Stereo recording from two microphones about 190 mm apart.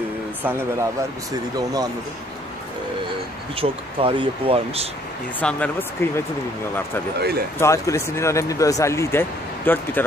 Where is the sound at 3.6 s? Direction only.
25° right (ahead or behind).